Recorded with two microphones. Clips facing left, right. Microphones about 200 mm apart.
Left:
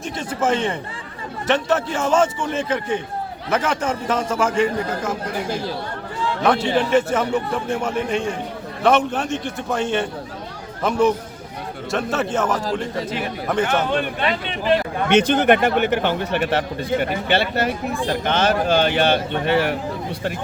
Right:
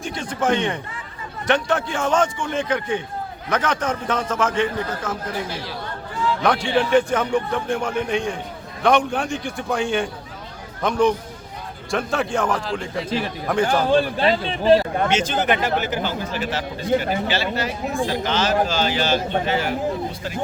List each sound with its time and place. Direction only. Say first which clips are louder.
0.0 s a man's voice: left 1 dB; 5° left (ahead or behind)
5.5 s speech: left 6 dB; 45° left (ahead or behind)
6.7 s a man's voice: even; 5° left (ahead or behind)
13.7 s speech: right 3 dB; 30° right (ahead or behind)
15.1 s a man's voice: left 9 dB; 60° left (ahead or behind)